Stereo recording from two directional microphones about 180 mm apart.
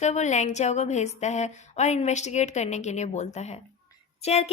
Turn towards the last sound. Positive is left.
turn(degrees=35)  # may be behind; listen again after turning